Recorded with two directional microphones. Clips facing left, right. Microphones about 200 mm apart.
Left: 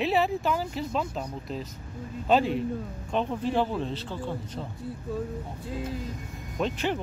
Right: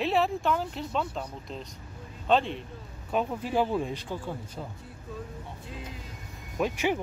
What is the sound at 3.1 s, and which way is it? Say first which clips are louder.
Speech: left 1 dB; 5° right (ahead or behind).